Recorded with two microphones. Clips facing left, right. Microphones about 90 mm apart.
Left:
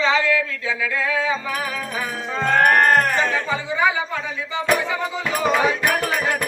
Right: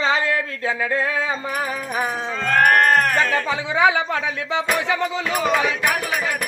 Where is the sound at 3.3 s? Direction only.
70° right (ahead or behind); by 4.6 s 90° right.